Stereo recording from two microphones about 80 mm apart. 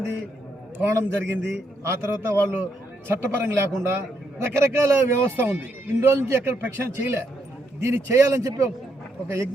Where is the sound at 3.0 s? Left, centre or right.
Right.